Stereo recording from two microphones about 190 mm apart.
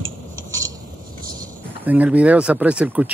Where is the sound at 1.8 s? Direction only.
10° right (ahead or behind).